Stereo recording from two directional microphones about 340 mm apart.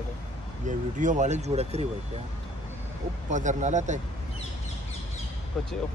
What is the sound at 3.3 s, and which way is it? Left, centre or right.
Speech, right.